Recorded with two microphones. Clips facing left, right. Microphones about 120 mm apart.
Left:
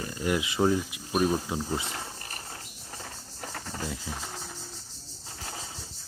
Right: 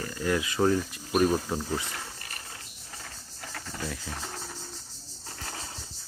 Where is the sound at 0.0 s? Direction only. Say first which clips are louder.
Even; 20° left (ahead or behind).